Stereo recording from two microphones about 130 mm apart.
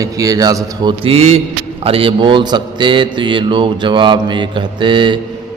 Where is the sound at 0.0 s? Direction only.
25° right (ahead or behind).